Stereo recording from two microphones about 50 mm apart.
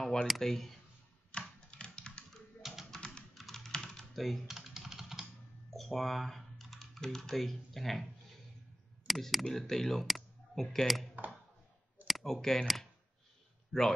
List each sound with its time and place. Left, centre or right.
0.0 s clicking: centre
0.3 s speech: centre
1.3 s typing: centre
2.6 s tap: centre
2.9 s typing: centre
3.3 s typing: centre
7.0 s speech: centre
9.0 s speech: centre
12.1 s speech: centre